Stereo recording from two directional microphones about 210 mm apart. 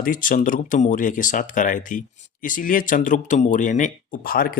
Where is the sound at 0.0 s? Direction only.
40° left (ahead or behind).